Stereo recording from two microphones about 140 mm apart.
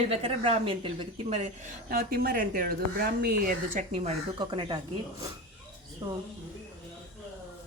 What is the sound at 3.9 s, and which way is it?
Speech, 50° right (ahead or behind).